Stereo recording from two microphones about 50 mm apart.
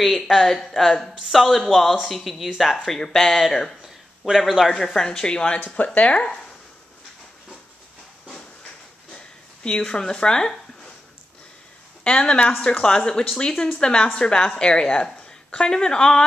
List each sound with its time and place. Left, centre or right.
0.0 s speech: centre
4.7 s a woman's voice: centre
9.1 s a sound: centre
9.9 s a woman's voice: centre
12.0 s a woman's voice: left